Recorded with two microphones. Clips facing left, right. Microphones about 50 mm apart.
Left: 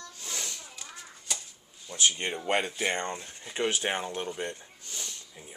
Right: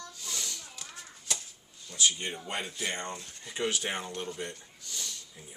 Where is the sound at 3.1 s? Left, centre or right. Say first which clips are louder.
Left 3 dB; left.